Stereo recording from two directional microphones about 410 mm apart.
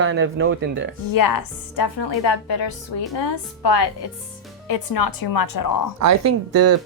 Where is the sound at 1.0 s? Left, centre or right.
Left.